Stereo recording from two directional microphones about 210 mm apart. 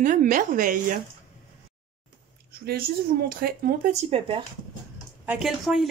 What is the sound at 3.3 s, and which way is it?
Speech, 45° right (ahead or behind).